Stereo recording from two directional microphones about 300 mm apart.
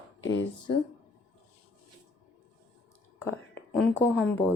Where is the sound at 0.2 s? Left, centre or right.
Left.